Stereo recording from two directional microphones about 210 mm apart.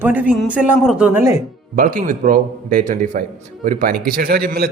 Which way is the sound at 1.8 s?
40° right (ahead or behind).